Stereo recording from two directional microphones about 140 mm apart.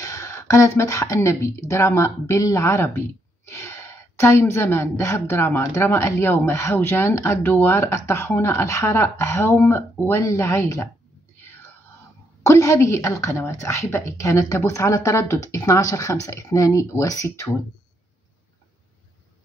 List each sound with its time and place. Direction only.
0.0 s a woman's voice: 20° left (ahead or behind)
12.4 s a woman's voice: 20° left (ahead or behind)